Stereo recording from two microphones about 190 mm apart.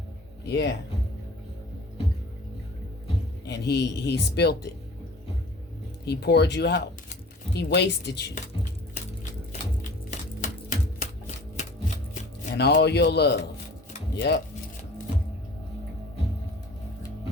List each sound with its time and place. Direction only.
0.4 s speech: 60° left (ahead or behind)
3.4 s speech: 60° left (ahead or behind)
6.1 s speech: 60° left (ahead or behind)
10.1 s typewriter: 40° left (ahead or behind)
12.5 s speech: 60° left (ahead or behind)